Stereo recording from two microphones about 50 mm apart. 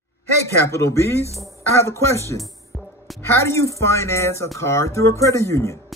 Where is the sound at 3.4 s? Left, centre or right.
Left.